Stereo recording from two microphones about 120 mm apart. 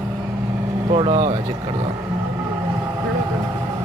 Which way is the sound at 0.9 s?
50° right (ahead or behind).